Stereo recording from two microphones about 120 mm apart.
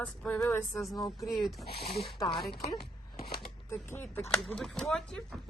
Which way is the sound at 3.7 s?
20° left (ahead or behind).